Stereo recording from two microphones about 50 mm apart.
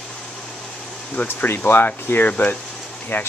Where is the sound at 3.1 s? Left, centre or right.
Left.